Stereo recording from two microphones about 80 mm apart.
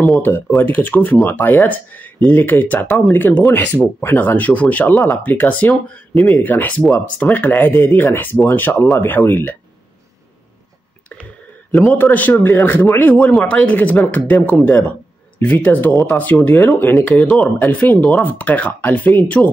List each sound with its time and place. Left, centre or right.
0.6 s speech: left
4.9 s speech: left
5.2 s speech: left
11.8 s speech: left
13.1 s speech: centre